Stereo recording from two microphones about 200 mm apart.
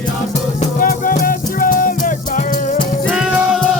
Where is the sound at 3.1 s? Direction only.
5° right (ahead or behind).